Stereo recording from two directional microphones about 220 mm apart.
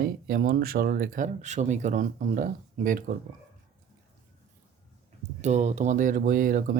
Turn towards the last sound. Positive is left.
turn(degrees=-40)  # may be behind; listen again after turning